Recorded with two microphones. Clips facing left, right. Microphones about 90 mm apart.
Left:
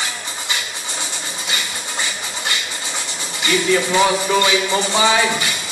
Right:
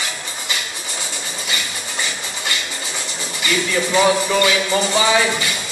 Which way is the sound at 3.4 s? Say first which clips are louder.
Left 3 dB; 20° left (ahead or behind).